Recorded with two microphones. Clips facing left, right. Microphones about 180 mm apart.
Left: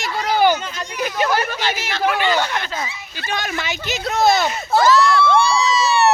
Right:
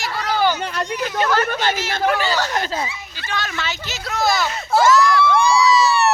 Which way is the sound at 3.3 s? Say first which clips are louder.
Left 2 dB; 15° left (ahead or behind).